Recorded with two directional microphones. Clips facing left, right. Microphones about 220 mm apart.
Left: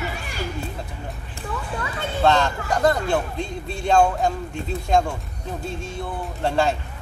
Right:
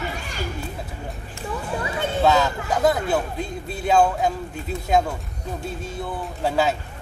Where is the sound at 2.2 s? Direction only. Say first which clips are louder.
Even; 5° right (ahead or behind).